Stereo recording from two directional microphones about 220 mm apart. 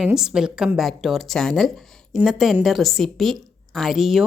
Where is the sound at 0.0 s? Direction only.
5° right (ahead or behind).